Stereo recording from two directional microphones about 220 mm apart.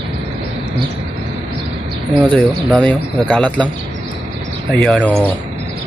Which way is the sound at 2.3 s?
5° left (ahead or behind).